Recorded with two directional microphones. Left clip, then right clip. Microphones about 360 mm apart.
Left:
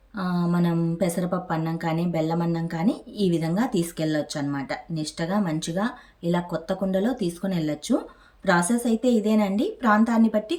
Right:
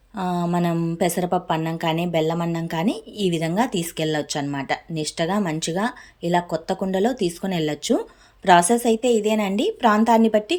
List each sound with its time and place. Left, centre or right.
0.2 s a woman's voice: centre